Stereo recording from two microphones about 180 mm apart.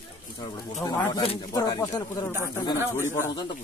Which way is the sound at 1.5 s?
20° left (ahead or behind).